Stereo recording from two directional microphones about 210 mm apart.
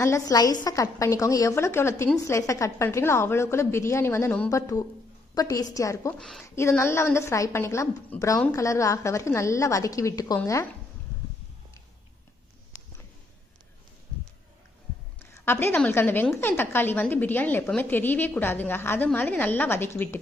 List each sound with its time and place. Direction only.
0.0 s a woman's voice: 15° left (ahead or behind)
6.1 s speech: centre (ahead or behind)
6.4 s a woman's voice: 10° left (ahead or behind)
15.3 s a woman's voice: 10° left (ahead or behind)